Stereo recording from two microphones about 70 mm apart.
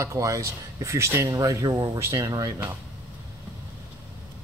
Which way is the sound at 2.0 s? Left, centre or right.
Right.